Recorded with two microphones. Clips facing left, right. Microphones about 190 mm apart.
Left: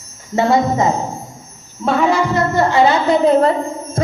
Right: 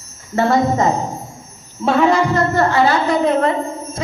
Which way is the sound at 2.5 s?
20° left (ahead or behind).